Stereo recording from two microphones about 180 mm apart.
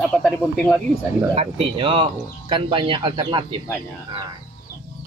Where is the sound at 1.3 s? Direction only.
30° right (ahead or behind).